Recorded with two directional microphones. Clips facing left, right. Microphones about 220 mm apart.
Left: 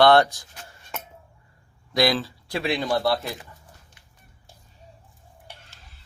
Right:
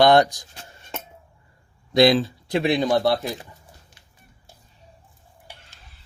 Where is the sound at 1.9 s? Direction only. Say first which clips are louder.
Right 6 dB; 20° right (ahead or behind).